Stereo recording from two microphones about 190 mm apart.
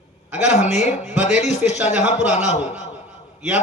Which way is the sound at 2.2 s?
5° right (ahead or behind).